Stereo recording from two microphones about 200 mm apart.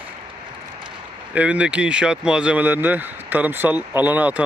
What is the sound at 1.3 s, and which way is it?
Speech, 5° right (ahead or behind).